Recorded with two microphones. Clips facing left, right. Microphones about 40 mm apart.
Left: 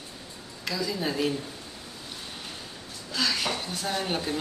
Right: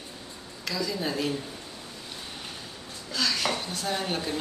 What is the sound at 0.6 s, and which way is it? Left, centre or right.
Speech, centre.